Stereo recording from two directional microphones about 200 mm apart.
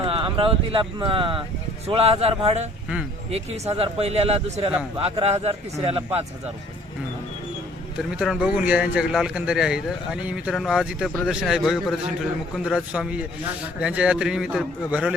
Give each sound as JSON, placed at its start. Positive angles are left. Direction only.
{"t": 0.0, "sound": "speech", "side_deg": -25}
{"t": 8.1, "sound": "a man's voice", "side_deg": -5}